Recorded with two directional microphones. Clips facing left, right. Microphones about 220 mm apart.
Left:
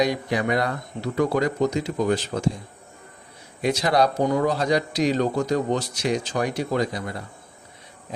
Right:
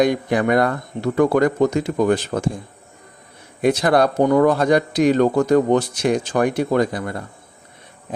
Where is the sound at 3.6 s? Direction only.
55° right (ahead or behind).